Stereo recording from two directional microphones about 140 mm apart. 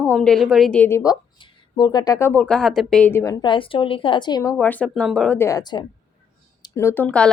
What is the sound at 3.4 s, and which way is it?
A woman's voice, 40° left (ahead or behind).